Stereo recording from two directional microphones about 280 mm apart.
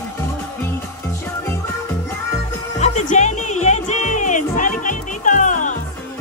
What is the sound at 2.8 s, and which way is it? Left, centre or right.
Music, left.